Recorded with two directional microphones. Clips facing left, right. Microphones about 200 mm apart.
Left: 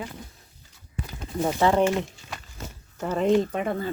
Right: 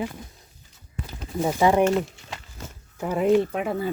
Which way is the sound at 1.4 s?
5° right (ahead or behind).